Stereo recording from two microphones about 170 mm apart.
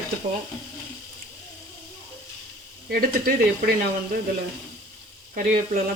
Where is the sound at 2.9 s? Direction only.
60° right (ahead or behind).